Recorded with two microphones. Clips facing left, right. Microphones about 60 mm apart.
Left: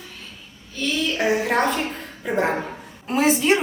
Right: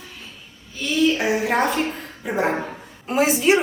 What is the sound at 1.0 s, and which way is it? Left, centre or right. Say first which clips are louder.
A woman's voice: right 3 dB; centre.